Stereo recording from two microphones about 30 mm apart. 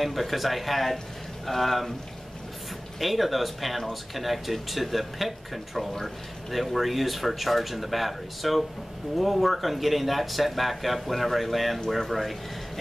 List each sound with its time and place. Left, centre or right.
0.0 s speech: centre
3.0 s speech: centre